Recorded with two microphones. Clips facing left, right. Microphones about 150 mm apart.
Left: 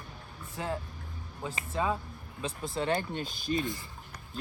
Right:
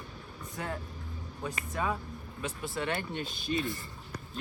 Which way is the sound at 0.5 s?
20° left (ahead or behind).